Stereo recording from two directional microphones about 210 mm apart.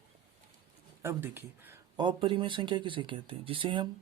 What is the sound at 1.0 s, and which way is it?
Speech, 10° right (ahead or behind).